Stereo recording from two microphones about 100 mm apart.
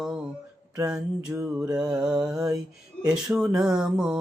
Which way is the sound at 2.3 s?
35° right (ahead or behind).